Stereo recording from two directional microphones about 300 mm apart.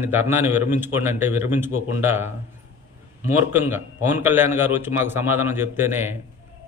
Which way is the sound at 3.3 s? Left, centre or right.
Centre.